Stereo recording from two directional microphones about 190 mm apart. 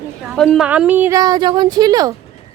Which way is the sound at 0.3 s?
Centre (ahead or behind).